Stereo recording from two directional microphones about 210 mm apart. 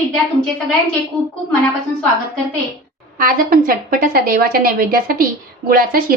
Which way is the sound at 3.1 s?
40° right (ahead or behind).